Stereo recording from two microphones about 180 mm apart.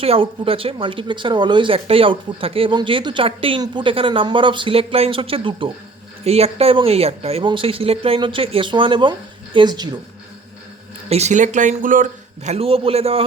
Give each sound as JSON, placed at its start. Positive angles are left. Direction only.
{"t": 0.0, "sound": "speech", "side_deg": -30}
{"t": 11.1, "sound": "speech", "side_deg": -40}
{"t": 12.5, "sound": "a man's voice", "side_deg": -30}